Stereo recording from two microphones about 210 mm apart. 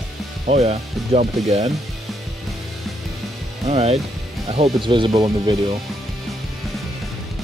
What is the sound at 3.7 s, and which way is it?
Speech, 30° right (ahead or behind).